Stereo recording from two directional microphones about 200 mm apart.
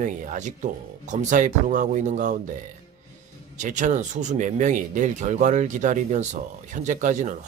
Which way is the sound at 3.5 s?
40° right (ahead or behind).